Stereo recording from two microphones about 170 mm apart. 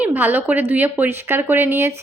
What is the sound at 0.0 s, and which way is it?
A woman's voice, 10° right (ahead or behind).